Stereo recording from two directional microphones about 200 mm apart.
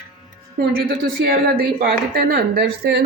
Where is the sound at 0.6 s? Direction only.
50° right (ahead or behind).